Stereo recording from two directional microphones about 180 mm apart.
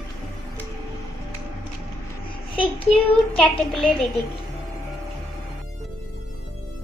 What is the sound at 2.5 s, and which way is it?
Child singing, 30° left (ahead or behind).